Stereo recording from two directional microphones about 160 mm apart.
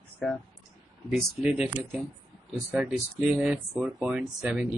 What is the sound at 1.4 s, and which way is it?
Speech, 5° right (ahead or behind).